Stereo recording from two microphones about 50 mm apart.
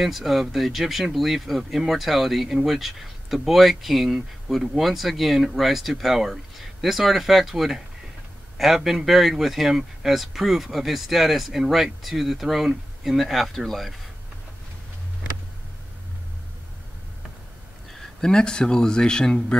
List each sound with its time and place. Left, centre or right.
0.0 s speech: centre
17.9 s speech: centre